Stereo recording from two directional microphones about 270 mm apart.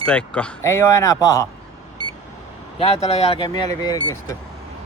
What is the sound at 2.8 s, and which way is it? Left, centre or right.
Speech, left.